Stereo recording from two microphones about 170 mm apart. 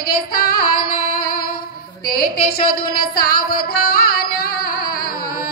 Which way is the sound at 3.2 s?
65° left (ahead or behind).